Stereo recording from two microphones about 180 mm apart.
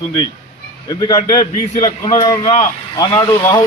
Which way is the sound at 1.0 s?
20° left (ahead or behind).